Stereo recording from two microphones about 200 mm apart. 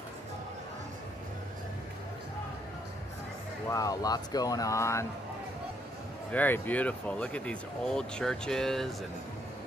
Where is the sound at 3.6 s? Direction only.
15° left (ahead or behind).